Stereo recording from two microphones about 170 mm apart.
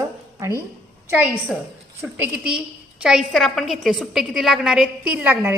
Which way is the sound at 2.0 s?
5° right (ahead or behind).